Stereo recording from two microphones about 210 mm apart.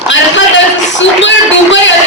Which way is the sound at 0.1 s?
60° left (ahead or behind).